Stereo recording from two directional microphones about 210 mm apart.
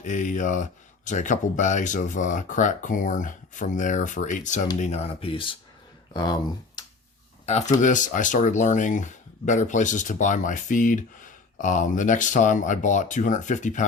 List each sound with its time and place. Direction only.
0.0 s speech: 35° left (ahead or behind); by 6.8 s 20° left (ahead or behind)
7.4 s speech: 30° left (ahead or behind)